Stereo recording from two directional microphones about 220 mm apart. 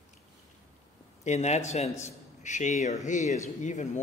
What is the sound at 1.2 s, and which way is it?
A man's voice, 30° left (ahead or behind).